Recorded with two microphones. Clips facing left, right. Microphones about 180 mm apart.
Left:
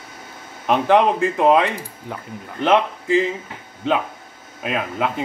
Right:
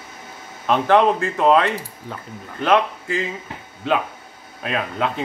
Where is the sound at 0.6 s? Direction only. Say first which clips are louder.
Even; 15° left (ahead or behind).